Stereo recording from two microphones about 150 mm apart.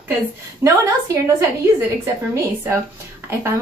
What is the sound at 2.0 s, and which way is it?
Speech, 20° right (ahead or behind).